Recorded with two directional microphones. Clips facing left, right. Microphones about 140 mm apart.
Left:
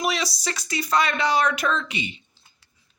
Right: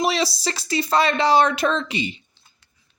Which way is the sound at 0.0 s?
30° right (ahead or behind).